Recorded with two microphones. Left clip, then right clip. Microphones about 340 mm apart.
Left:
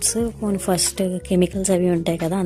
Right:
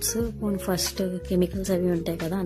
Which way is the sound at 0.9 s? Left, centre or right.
Right.